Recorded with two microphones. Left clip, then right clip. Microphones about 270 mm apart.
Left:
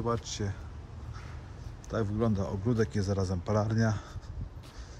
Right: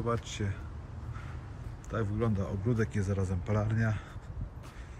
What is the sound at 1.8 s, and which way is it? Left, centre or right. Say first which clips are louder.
Speech: left 2 dB; centre.